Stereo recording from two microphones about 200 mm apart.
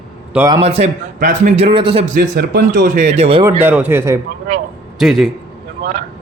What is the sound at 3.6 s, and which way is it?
Speech, 10° right (ahead or behind).